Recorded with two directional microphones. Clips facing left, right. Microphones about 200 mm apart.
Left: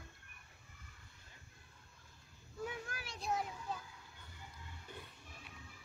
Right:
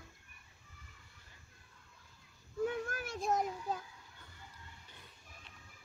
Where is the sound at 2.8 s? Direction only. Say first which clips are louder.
Right 6 dB; 50° right (ahead or behind).